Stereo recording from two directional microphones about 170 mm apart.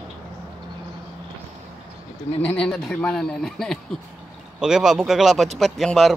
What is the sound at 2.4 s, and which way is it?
A man's voice, 5° left (ahead or behind).